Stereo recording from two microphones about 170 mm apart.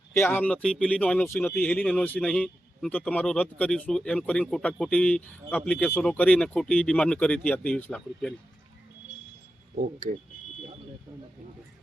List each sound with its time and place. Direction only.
0.1 s speech: 15° left (ahead or behind)
9.7 s speech: 55° right (ahead or behind)